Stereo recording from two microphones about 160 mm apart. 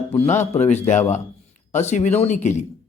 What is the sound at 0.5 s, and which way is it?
Speech, 45° left (ahead or behind).